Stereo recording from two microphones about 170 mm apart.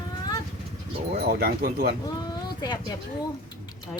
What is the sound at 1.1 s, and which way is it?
Speech, 60° right (ahead or behind).